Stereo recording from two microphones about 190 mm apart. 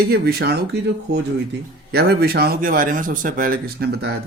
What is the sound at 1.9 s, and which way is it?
Speech, 55° right (ahead or behind).